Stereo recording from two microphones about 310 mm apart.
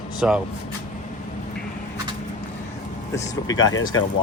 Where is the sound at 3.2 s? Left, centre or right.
Centre.